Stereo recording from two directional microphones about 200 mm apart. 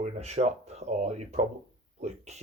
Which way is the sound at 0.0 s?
35° right (ahead or behind).